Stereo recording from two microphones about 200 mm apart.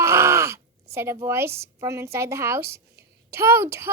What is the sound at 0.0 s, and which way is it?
Speech, 15° right (ahead or behind).